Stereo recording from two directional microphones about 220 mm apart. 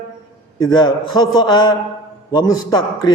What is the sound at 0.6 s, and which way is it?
A man's voice, 20° left (ahead or behind).